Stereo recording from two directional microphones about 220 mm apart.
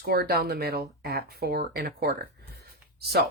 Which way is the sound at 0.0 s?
45° right (ahead or behind).